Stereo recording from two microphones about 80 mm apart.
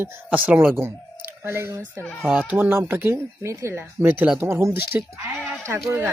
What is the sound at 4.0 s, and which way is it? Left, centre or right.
Speech, right.